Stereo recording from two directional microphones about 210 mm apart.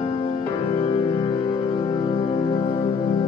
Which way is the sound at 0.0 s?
30° left (ahead or behind).